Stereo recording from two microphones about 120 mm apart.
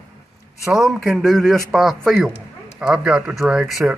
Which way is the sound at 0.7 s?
5° right (ahead or behind).